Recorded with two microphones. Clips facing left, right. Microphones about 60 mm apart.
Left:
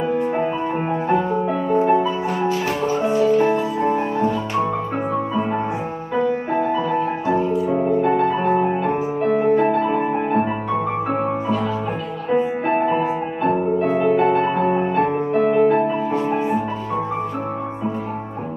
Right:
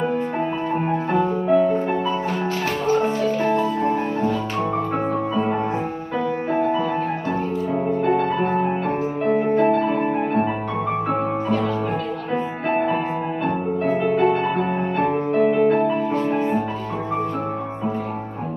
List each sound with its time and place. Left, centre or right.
0.8 s music: centre
6.1 s music: left
7.2 s music: centre